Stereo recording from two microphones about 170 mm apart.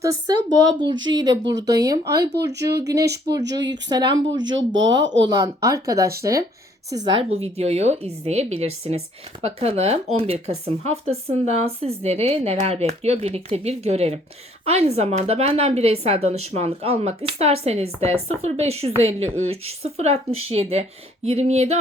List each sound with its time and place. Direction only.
0.0 s speech: 25° right (ahead or behind)
3.4 s speech: 90° right
3.8 s speech: 25° right (ahead or behind)
4.4 s speech: 90° right
5.2 s speech: 20° right (ahead or behind); by 21.8 s 40° right (ahead or behind)